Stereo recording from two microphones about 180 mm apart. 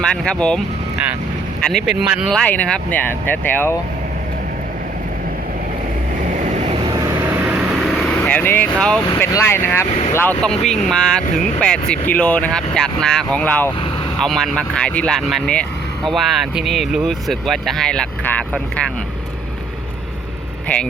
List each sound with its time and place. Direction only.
0.0 s speech: 5° left (ahead or behind)
1.7 s speech: 5° right (ahead or behind)
6.4 s vehicle: 40° right (ahead or behind)
8.2 s speech: 10° left (ahead or behind)